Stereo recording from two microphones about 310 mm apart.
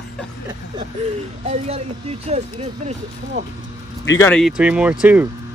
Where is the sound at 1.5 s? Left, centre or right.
Centre.